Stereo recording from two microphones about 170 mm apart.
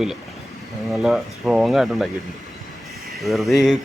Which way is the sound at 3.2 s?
Centre (ahead or behind).